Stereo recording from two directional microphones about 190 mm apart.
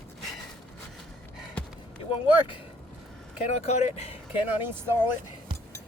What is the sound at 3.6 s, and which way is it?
Speech, 35° left (ahead or behind).